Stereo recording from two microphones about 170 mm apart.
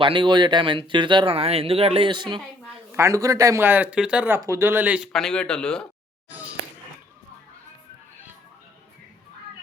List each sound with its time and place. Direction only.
0.0 s speech: 30° right (ahead or behind); by 5.9 s 5° left (ahead or behind)